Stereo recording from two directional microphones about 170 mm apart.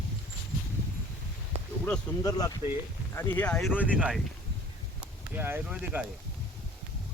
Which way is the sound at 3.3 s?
5° left (ahead or behind).